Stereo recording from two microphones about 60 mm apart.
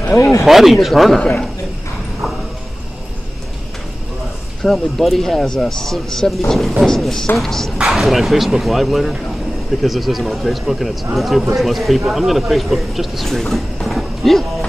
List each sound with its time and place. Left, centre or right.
0.2 s speech: left
0.5 s speech: centre
4.6 s speech: centre
13.8 s music: centre